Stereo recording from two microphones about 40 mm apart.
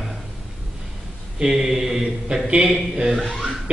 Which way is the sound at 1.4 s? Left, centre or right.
Centre.